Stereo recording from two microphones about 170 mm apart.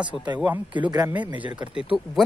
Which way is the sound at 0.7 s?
25° right (ahead or behind).